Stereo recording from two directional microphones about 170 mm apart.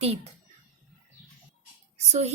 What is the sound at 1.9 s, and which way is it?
Speech, 40° right (ahead or behind).